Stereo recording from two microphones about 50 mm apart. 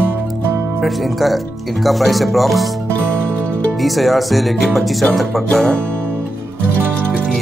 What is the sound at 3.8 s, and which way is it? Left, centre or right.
Speech, centre.